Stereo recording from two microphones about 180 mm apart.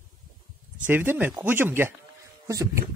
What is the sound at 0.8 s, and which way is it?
Speech, 10° right (ahead or behind).